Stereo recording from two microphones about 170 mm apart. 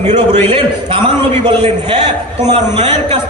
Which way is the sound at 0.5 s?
30° right (ahead or behind).